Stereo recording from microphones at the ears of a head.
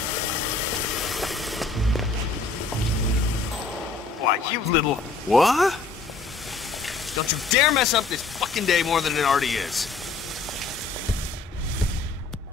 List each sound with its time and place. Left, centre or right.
0.0 s a sound: left
1.2 s music: centre
4.2 s speech: left
5.4 s speech: centre
7.2 s speech: left